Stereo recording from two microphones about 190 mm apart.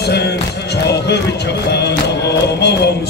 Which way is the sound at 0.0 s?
60° left (ahead or behind).